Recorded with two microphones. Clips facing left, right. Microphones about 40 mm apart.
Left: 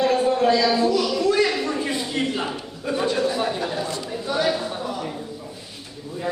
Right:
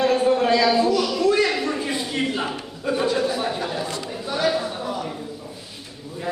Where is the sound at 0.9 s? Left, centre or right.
Centre.